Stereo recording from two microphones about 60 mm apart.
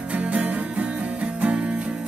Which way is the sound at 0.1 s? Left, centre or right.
Right.